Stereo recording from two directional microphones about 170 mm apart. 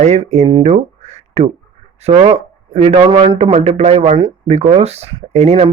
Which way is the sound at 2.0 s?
40° right (ahead or behind).